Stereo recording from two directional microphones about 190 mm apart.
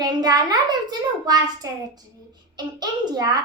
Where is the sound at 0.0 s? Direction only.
20° right (ahead or behind).